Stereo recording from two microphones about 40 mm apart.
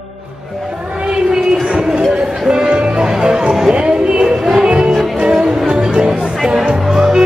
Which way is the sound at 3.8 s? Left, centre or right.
Right.